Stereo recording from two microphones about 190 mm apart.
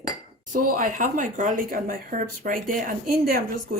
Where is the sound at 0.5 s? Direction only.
45° right (ahead or behind).